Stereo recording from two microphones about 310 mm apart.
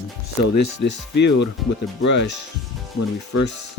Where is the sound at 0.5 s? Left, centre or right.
Left.